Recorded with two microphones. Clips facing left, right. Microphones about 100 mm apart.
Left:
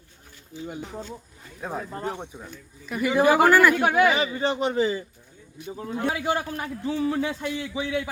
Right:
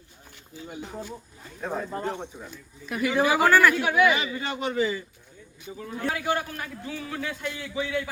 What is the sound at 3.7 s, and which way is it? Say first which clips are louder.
Speech: left 2 dB; 45° left (ahead or behind).